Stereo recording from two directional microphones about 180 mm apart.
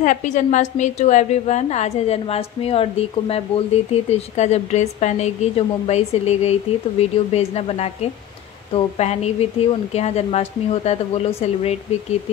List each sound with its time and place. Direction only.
0.0 s a woman's voice: 45° left (ahead or behind)